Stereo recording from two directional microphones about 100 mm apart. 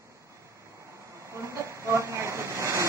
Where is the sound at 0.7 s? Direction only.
30° right (ahead or behind).